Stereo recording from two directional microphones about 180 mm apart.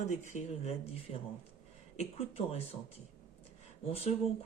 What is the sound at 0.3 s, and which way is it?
Speech, 40° left (ahead or behind).